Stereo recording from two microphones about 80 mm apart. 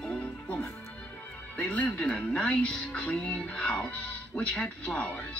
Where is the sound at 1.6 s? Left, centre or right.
Centre.